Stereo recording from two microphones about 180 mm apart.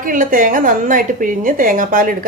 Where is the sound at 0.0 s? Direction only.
50° right (ahead or behind).